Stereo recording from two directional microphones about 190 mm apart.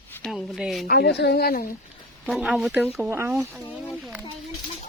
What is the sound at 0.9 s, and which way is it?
Speech, 60° left (ahead or behind).